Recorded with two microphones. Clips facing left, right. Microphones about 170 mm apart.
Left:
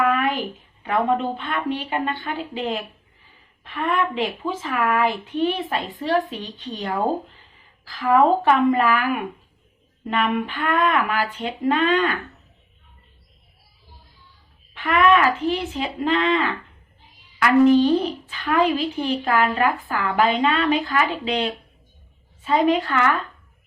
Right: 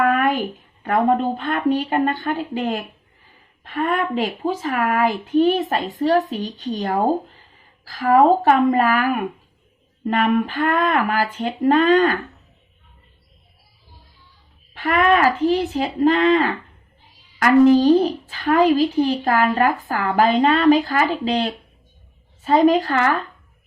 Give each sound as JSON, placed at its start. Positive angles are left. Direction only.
{"t": 0.0, "sound": "a woman's voice", "side_deg": -45}
{"t": 14.7, "sound": "a woman's voice", "side_deg": -40}